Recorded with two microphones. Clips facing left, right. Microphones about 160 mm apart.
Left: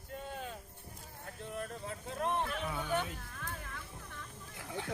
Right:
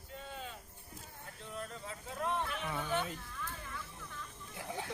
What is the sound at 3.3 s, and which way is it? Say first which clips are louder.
Music: even; 50° left (ahead or behind).